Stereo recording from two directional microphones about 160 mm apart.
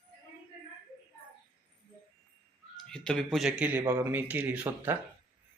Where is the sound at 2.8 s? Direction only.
5° left (ahead or behind).